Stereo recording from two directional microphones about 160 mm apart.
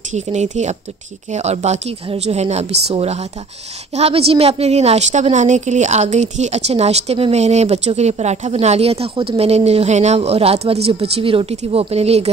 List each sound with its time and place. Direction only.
0.1 s a woman's voice: 45° right (ahead or behind)